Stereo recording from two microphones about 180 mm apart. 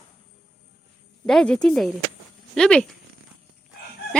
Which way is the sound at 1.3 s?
5° left (ahead or behind).